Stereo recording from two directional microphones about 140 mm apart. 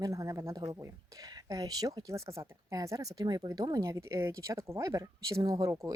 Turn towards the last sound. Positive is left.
turn(degrees=-25)  # may be behind; listen again after turning